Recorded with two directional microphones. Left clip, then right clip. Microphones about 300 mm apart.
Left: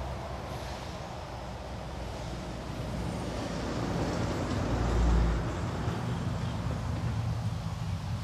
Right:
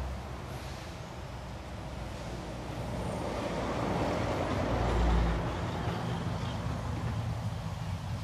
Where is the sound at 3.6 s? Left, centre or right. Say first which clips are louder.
Right 2 dB; centre.